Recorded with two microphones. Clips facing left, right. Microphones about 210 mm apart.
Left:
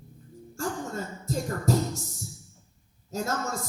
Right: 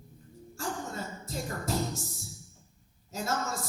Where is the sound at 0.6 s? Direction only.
45° left (ahead or behind).